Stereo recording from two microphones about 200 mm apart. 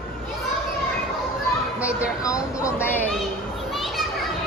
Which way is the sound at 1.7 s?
5° right (ahead or behind).